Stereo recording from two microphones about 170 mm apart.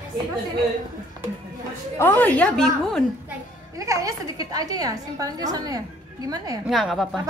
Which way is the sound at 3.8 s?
20° right (ahead or behind).